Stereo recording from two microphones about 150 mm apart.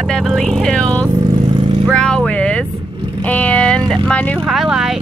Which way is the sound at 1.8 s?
5° left (ahead or behind).